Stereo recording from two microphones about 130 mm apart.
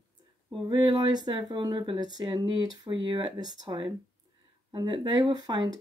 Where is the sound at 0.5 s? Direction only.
35° right (ahead or behind).